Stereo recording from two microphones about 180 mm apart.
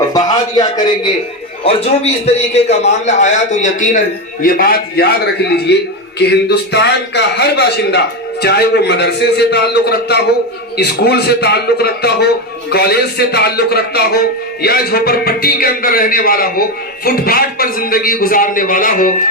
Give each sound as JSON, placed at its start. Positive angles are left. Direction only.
{"t": 0.1, "sound": "a sound", "side_deg": 20}
{"t": 2.2, "sound": "a man's voice", "side_deg": 35}
{"t": 4.4, "sound": "a man's voice", "side_deg": 55}